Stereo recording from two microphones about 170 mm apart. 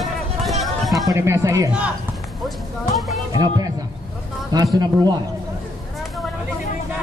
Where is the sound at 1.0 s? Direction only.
15° right (ahead or behind).